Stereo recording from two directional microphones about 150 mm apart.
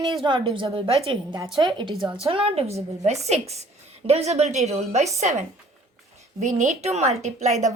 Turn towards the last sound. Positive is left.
turn(degrees=-50)  # may be behind; listen again after turning